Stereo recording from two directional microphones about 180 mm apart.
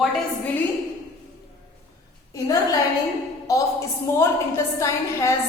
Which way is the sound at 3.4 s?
15° left (ahead or behind).